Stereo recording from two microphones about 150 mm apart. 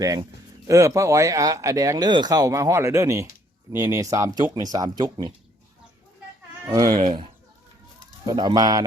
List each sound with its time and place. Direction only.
0.0 s speech: 25° right (ahead or behind)
6.7 s speech: 25° right (ahead or behind)
8.3 s speech: 30° right (ahead or behind)